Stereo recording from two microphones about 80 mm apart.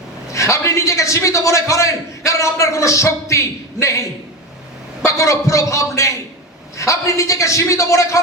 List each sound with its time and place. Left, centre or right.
0.3 s a man's voice: left
5.0 s a man's voice: left